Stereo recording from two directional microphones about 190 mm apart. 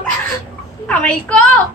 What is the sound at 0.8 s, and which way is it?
Speech, 5° left (ahead or behind).